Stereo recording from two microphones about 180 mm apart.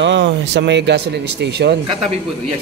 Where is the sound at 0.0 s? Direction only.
80° right.